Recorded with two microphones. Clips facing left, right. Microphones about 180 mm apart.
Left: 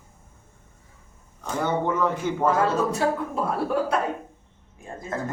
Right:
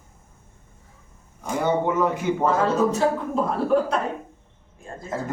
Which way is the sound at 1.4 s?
10° right (ahead or behind).